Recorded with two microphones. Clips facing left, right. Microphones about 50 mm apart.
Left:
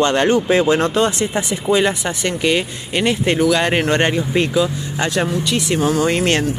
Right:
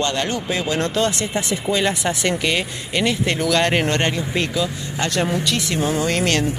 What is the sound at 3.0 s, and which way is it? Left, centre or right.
Speech, left.